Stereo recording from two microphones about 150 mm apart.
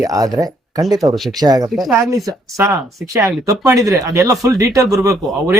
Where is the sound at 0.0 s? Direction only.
25° right (ahead or behind).